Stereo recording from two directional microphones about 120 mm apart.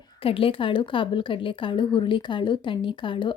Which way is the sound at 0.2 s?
50° left (ahead or behind).